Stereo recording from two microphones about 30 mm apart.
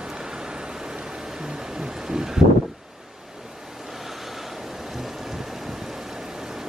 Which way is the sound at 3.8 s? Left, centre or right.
Centre.